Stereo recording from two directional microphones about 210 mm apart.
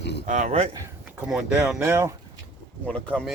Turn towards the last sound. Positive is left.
turn(degrees=5)  # may be behind; listen again after turning